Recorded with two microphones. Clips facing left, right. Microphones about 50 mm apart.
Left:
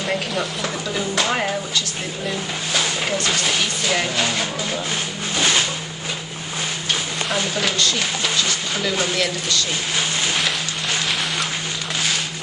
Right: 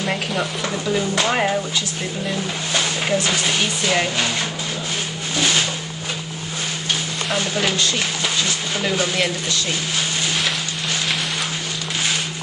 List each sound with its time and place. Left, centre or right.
0.0 s stir: centre
1.1 s speech: centre
2.7 s speech: centre
7.2 s speech: centre
9.1 s speech: centre